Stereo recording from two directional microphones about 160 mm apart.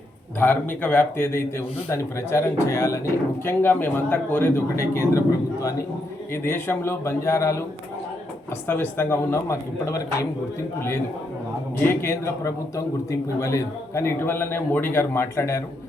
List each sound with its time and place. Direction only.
0.3 s a man's voice: 10° left (ahead or behind)
6.3 s a man's voice: 15° left (ahead or behind)
8.6 s a man's voice: 15° left (ahead or behind)